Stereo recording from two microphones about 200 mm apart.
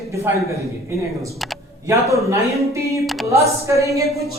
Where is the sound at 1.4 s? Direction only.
Centre (ahead or behind).